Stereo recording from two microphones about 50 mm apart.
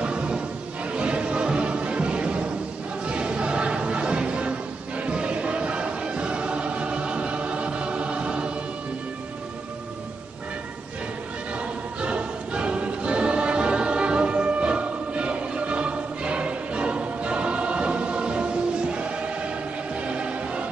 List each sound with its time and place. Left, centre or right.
0.0 s music: right
11.5 s music: right
18.9 s choir: right
20.0 s music: right